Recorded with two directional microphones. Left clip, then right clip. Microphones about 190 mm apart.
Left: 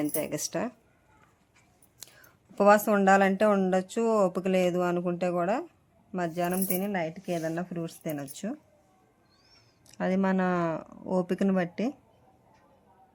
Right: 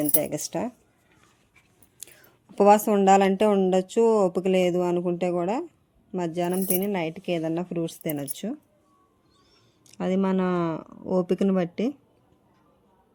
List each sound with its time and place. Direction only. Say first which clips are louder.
0.0 s speech: right 4 dB; 15° right (ahead or behind)
2.6 s speech: right 3 dB; 15° right (ahead or behind)
9.8 s speech: right 2 dB; 10° right (ahead or behind)